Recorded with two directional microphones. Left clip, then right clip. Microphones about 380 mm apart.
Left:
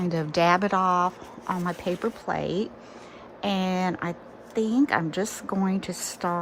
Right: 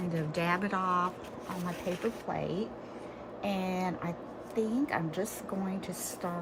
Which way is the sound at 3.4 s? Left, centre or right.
Centre.